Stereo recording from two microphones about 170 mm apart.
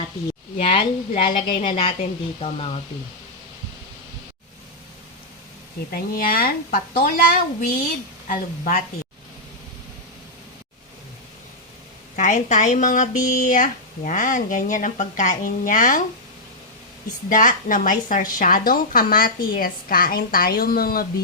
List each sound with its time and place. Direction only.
0.6 s a woman's voice: 30° left (ahead or behind)
5.9 s a woman's voice: 60° left (ahead or behind)
12.1 s speech: 45° left (ahead or behind)
17.2 s a woman's voice: 50° left (ahead or behind)